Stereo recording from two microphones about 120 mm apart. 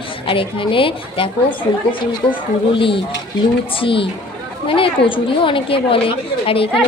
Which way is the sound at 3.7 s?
45° left (ahead or behind).